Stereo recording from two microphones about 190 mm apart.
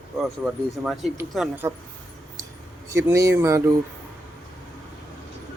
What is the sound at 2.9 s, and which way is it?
Speech, 15° right (ahead or behind).